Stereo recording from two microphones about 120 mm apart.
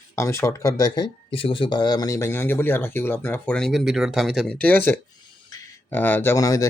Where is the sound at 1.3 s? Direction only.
50° left (ahead or behind); by 3.7 s 10° left (ahead or behind).